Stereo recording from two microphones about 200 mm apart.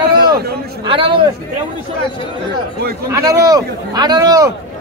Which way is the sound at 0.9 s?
25° right (ahead or behind).